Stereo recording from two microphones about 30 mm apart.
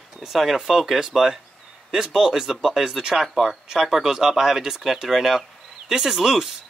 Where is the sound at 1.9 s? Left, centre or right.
Centre.